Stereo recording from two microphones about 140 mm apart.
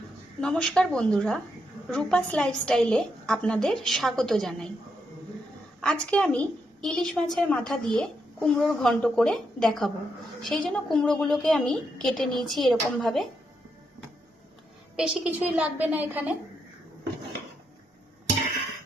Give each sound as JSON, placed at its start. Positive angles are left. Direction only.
{"t": 0.4, "sound": "a woman's voice", "side_deg": 5}
{"t": 5.8, "sound": "a woman's voice", "side_deg": 5}
{"t": 14.9, "sound": "a woman's voice", "side_deg": -5}